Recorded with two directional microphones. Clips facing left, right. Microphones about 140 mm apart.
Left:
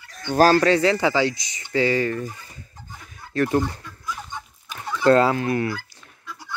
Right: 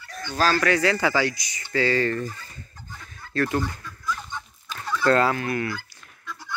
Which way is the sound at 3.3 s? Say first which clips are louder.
Left 4 dB; 20° left (ahead or behind).